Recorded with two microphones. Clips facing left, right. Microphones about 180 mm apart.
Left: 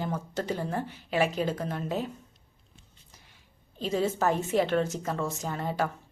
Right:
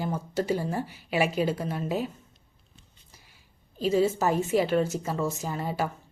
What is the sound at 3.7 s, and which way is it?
A woman's voice, 5° right (ahead or behind).